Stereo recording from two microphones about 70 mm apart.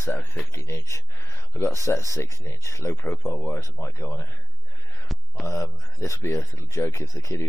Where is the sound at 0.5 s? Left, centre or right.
Left.